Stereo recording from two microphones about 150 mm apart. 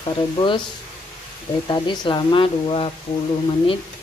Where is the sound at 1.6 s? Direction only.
30° left (ahead or behind).